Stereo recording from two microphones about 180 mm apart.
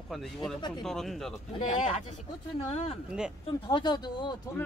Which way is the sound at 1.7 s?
30° left (ahead or behind).